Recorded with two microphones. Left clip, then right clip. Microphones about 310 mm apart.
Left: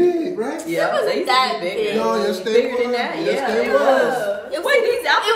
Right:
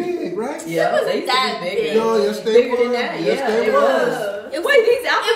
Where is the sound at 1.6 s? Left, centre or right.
Centre.